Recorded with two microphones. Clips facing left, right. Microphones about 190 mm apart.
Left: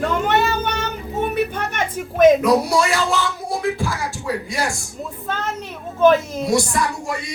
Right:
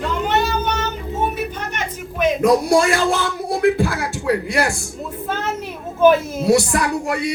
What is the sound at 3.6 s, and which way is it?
Beatboxing, 60° right (ahead or behind).